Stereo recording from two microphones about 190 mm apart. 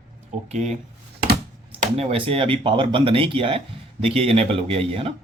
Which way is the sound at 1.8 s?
30° right (ahead or behind).